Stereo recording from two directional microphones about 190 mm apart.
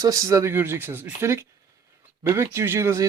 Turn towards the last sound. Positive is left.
turn(degrees=-15)  # may be behind; listen again after turning